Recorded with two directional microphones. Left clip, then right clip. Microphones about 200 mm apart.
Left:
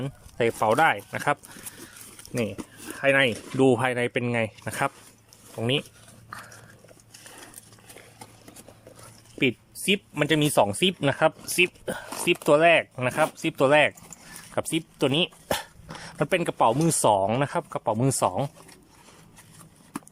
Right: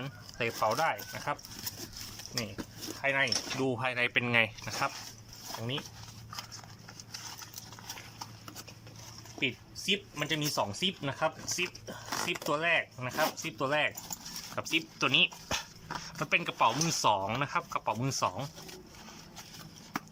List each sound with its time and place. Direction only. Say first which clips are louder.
0.0 s speech: left 9 dB; 35° left (ahead or behind); by 1.4 s 50° left (ahead or behind)
3.0 s speech: left 8 dB; 55° left (ahead or behind); by 4.7 s 25° left (ahead or behind)
9.4 s speech: left 8 dB; 60° left (ahead or behind); by 18.5 s 40° left (ahead or behind)